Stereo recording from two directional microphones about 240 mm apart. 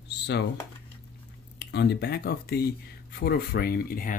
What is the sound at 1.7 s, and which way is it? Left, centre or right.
Speech, left.